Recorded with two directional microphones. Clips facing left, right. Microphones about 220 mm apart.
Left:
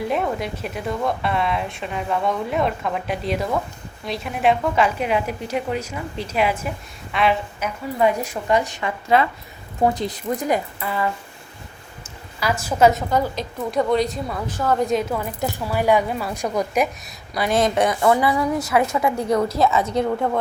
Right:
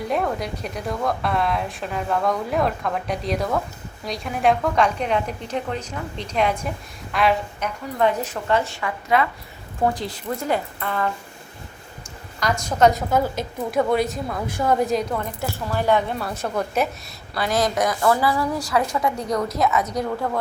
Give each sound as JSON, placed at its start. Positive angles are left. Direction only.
{"t": 0.0, "sound": "a woman's voice", "side_deg": 0}
{"t": 9.1, "sound": "a woman's voice", "side_deg": 30}
{"t": 12.4, "sound": "a woman's voice", "side_deg": 5}
{"t": 14.4, "sound": "a woman's voice", "side_deg": -10}
{"t": 14.8, "sound": "a woman's voice", "side_deg": 0}
{"t": 15.4, "sound": "a woman's voice", "side_deg": 15}